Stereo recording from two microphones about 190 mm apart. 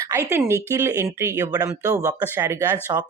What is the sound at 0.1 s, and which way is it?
Speech, 15° right (ahead or behind).